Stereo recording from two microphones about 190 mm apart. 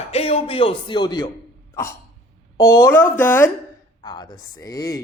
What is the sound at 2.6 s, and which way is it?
A woman's voice, 15° left (ahead or behind).